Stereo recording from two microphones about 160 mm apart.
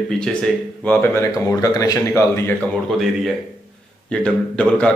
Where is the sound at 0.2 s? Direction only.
5° left (ahead or behind).